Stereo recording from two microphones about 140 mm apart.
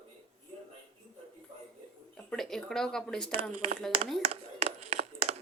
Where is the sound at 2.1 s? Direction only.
5° left (ahead or behind).